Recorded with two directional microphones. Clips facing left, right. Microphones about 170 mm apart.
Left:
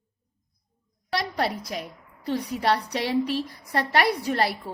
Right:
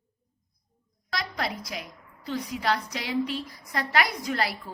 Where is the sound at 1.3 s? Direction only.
35° left (ahead or behind).